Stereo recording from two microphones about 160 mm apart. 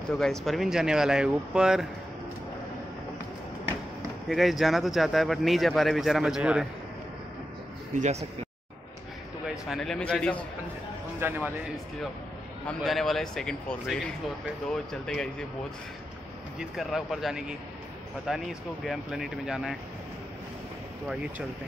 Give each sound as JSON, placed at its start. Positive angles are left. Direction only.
{"t": 0.1, "sound": "a man's voice", "side_deg": 5}
{"t": 4.3, "sound": "a man's voice", "side_deg": 0}
{"t": 7.9, "sound": "speech", "side_deg": -45}
{"t": 9.7, "sound": "a man's voice", "side_deg": 5}
{"t": 11.1, "sound": "speech", "side_deg": -15}
{"t": 12.6, "sound": "a man's voice", "side_deg": 0}
{"t": 16.5, "sound": "a man's voice", "side_deg": 0}